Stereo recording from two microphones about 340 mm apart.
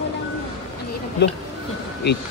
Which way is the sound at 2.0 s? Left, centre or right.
Left.